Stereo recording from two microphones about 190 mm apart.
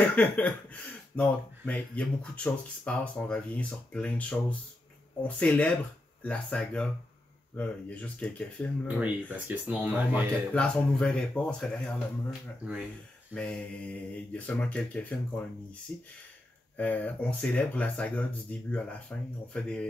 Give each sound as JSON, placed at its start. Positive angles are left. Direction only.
{"t": 0.0, "sound": "speech", "side_deg": 10}
{"t": 8.8, "sound": "speech", "side_deg": -10}
{"t": 10.5, "sound": "speech", "side_deg": 5}